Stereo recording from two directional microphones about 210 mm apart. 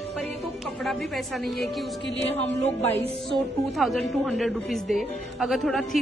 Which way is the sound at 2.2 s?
30° left (ahead or behind).